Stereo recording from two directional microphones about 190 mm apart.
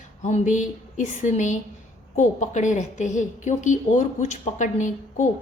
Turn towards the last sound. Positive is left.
turn(degrees=40)  # may be behind; listen again after turning